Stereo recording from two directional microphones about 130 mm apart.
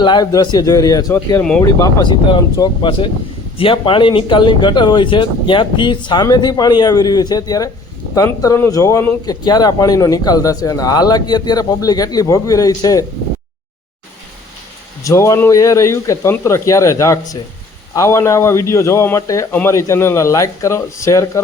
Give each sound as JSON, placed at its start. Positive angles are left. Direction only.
{"t": 0.0, "sound": "speech", "side_deg": 35}
{"t": 1.4, "sound": "speech", "side_deg": 5}
{"t": 1.6, "sound": "speech", "side_deg": 30}
{"t": 15.0, "sound": "speech", "side_deg": 25}